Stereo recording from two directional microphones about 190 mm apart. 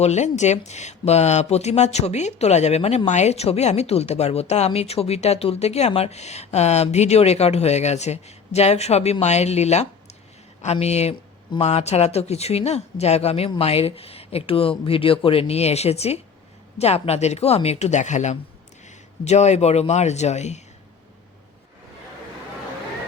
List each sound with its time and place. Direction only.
0.0 s speech: 35° left (ahead or behind)